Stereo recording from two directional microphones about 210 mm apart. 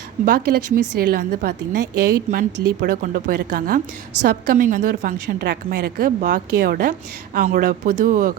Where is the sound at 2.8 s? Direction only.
40° right (ahead or behind).